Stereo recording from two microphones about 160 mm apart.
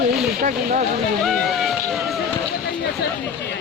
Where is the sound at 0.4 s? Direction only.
55° right (ahead or behind).